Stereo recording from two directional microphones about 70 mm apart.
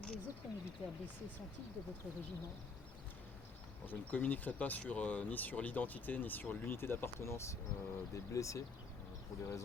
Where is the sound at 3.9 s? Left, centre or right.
Left.